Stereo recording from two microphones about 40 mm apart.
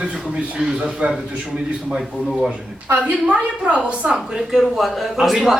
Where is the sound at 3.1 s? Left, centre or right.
Right.